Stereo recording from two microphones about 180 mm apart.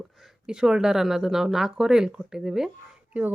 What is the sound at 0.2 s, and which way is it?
A woman's voice, 5° right (ahead or behind).